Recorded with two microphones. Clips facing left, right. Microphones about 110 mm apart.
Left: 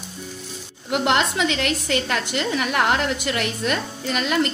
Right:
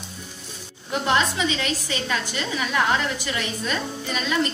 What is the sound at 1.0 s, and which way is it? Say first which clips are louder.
A woman's voice: left 1 dB; 65° left (ahead or behind).